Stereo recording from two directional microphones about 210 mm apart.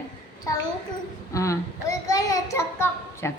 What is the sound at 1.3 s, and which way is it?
Child singing, 15° left (ahead or behind).